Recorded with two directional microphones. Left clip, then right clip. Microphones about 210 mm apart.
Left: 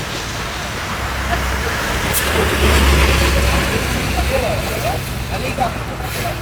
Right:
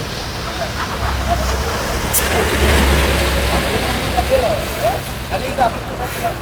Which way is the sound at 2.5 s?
40° right (ahead or behind).